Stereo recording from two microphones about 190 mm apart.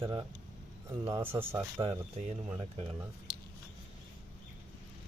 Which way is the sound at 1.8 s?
30° right (ahead or behind).